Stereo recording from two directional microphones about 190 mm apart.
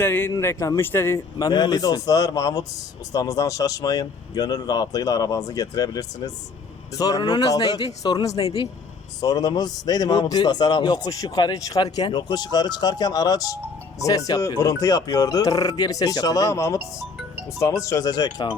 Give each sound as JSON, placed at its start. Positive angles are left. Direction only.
{"t": 0.0, "sound": "a man's voice", "side_deg": 10}